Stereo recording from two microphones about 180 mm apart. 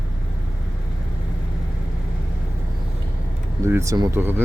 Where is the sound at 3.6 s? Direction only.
15° right (ahead or behind).